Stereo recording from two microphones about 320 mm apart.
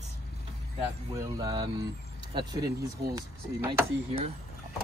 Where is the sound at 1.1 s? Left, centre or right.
Centre.